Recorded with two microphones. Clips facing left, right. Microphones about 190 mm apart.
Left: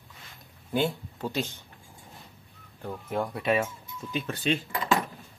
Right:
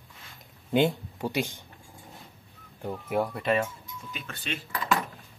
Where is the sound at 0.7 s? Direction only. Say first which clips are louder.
Right 4 dB; 20° right (ahead or behind).